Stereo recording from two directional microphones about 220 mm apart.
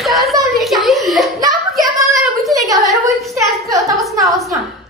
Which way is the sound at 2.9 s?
Centre (ahead or behind).